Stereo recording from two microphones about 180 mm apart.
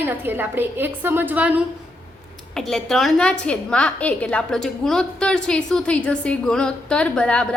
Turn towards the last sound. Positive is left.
turn(degrees=5)  # may be behind; listen again after turning